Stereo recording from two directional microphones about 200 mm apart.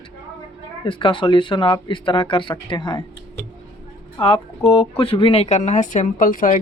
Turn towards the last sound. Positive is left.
turn(degrees=45)  # may be behind; listen again after turning